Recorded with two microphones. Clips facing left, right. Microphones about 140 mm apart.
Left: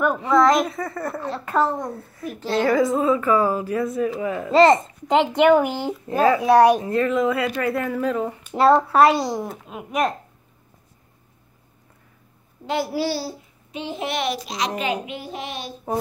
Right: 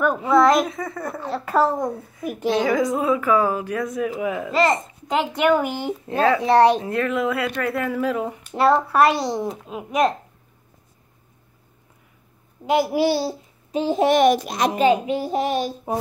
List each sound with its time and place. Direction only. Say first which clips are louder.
0.0 s a child's voice: right 1 dB; 5° right (ahead or behind)
2.4 s a child's voice: right 1 dB; 15° right (ahead or behind)
2.7 s a child's voice: left 1 dB; centre (ahead or behind)
4.0 s a child's voice: even; 10° right (ahead or behind)
4.5 s speech: left 7 dB; 30° left (ahead or behind)
5.3 s speech: left 2 dB; 20° left (ahead or behind)
6.0 s speech: left 2 dB; 5° left (ahead or behind)
6.9 s a child's voice: left 2 dB; centre (ahead or behind)
8.5 s speech: left 2 dB; 20° left (ahead or behind)
9.3 s a child's voice: right 2 dB; centre (ahead or behind)
12.6 s a child's voice: right 5 dB; 15° right (ahead or behind)
13.7 s a child's voice: right 10 dB; 40° right (ahead or behind)
15.0 s child singing: right 10 dB; 40° right (ahead or behind)